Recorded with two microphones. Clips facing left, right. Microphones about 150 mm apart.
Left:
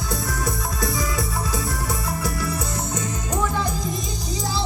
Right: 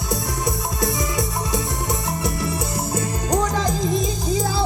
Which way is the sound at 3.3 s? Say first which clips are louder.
Right 4 dB; 85° right.